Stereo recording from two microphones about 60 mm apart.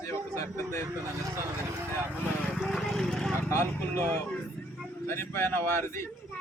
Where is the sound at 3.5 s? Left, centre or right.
Left.